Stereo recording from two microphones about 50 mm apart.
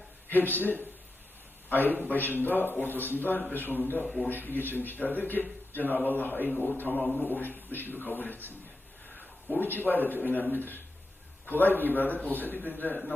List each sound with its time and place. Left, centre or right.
0.3 s a man's voice: left
2.0 s a man's voice: left
4.0 s a man's voice: centre
4.3 s a man's voice: left
9.6 s a man's voice: left